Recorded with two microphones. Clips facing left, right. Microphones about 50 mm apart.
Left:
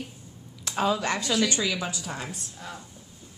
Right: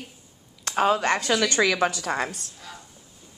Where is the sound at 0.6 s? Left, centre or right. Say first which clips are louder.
Right 4 dB; right.